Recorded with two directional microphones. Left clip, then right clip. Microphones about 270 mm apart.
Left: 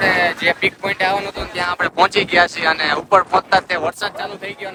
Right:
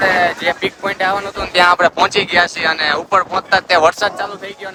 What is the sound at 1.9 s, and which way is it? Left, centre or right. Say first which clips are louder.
Speech: right 1 dB; centre.